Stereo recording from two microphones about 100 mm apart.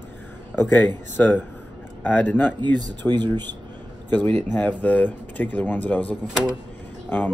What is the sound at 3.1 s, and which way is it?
Speech, 45° right (ahead or behind).